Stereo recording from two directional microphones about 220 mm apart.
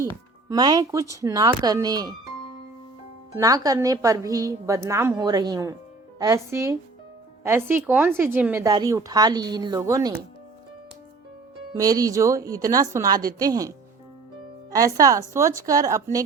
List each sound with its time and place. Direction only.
0.4 s speech: 15° right (ahead or behind)
3.3 s speech: 15° right (ahead or behind)
11.7 s speech: 15° right (ahead or behind)